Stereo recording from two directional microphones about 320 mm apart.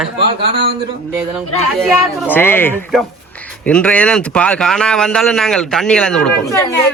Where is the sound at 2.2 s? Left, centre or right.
Centre.